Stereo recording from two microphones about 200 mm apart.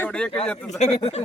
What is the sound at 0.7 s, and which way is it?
Speech, 35° left (ahead or behind).